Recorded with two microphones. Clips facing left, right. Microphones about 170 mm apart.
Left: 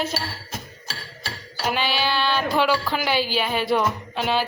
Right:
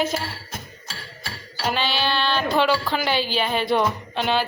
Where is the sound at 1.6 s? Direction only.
10° left (ahead or behind).